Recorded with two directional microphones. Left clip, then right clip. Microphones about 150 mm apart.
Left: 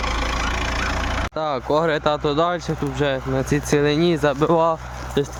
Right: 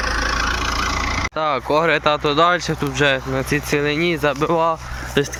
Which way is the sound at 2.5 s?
10° left (ahead or behind).